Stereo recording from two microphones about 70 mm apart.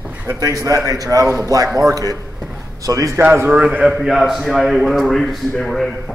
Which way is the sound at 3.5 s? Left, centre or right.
Centre.